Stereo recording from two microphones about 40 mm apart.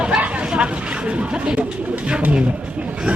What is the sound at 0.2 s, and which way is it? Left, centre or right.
Speech, right.